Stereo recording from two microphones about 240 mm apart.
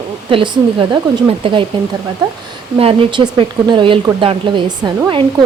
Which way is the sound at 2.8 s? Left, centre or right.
Right.